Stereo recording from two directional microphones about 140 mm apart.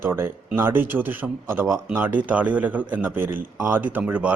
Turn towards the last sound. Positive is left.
turn(degrees=-10)  # may be behind; listen again after turning